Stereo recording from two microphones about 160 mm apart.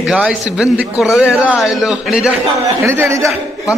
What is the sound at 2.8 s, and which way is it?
Speech, 15° right (ahead or behind).